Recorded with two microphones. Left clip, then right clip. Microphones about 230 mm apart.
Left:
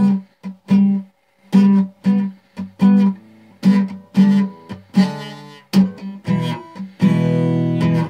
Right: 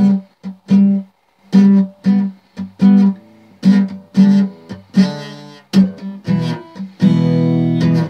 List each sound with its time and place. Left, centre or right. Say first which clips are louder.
0.0 s music: right 3 dB; centre